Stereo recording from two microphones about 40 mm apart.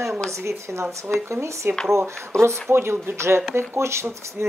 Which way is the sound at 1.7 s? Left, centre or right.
Right.